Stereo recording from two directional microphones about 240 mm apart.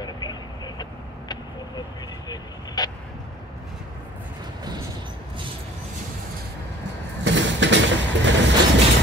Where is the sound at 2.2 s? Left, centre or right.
Centre.